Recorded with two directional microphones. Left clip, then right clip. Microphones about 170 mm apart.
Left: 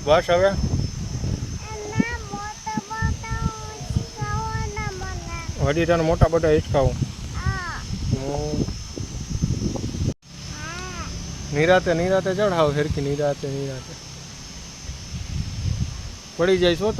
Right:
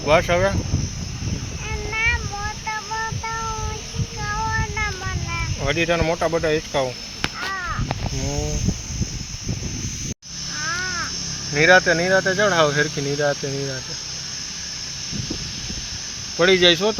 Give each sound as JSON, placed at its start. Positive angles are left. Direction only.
{"t": 0.1, "sound": "speech", "side_deg": 75}
{"t": 5.6, "sound": "speech", "side_deg": 55}
{"t": 11.5, "sound": "speech", "side_deg": 15}
{"t": 13.1, "sound": "speech", "side_deg": 5}
{"t": 16.4, "sound": "speech", "side_deg": 0}